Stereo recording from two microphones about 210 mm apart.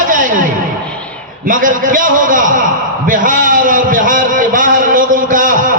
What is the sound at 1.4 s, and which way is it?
A man's voice, 40° right (ahead or behind).